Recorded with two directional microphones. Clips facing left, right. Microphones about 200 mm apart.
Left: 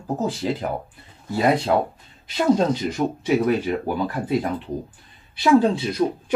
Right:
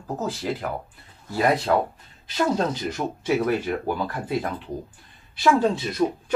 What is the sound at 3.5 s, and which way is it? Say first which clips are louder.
Speech: left 2 dB; 15° left (ahead or behind).